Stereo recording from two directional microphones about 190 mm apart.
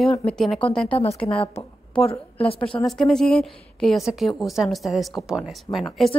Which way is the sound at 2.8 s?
5° left (ahead or behind).